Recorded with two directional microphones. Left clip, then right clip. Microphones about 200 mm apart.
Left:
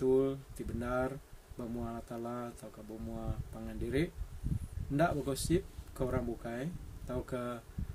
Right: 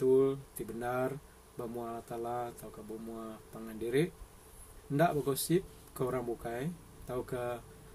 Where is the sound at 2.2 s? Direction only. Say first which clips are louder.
Right 5 dB; 5° left (ahead or behind).